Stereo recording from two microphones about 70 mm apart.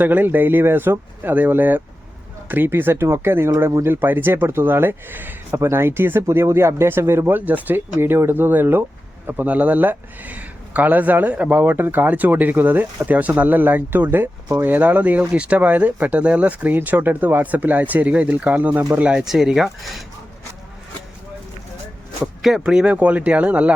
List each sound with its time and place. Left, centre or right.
0.0 s speech: right
14.4 s speech: right
14.7 s speech: right
19.2 s speech: centre
22.2 s speech: centre